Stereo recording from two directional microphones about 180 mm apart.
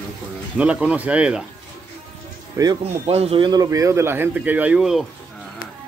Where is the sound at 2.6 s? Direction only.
15° right (ahead or behind).